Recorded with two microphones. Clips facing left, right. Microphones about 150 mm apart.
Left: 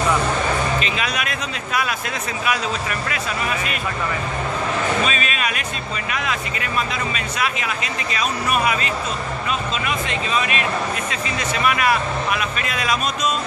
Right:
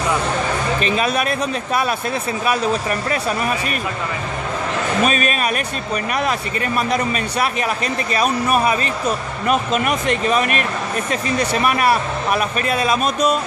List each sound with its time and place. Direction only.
0.7 s speech: 40° right (ahead or behind)
5.0 s speech: 50° right (ahead or behind)
9.5 s speech: 55° right (ahead or behind); by 13.0 s 30° right (ahead or behind)